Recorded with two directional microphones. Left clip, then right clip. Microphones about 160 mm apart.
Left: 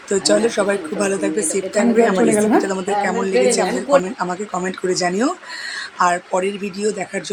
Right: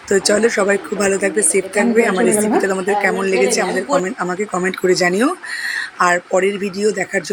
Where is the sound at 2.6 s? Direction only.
15° right (ahead or behind).